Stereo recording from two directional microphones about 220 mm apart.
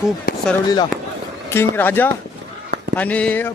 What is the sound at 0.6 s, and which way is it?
Speech, 20° left (ahead or behind).